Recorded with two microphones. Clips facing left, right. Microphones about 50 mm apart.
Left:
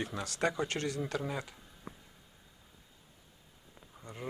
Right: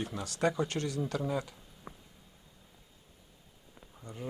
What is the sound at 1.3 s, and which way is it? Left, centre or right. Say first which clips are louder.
Speech: right 5 dB; centre.